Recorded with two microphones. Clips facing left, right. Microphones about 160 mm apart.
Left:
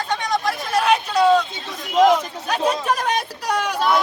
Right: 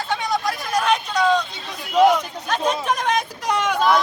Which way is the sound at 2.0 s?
5° left (ahead or behind).